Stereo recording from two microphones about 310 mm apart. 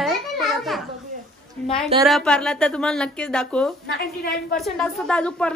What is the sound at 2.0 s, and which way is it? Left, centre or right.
Speech, centre.